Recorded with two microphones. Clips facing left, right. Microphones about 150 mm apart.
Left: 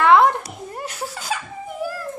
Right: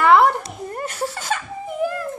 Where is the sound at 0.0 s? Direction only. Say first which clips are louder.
Even; 5° right (ahead or behind).